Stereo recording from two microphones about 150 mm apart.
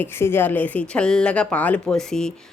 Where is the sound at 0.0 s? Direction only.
15° left (ahead or behind).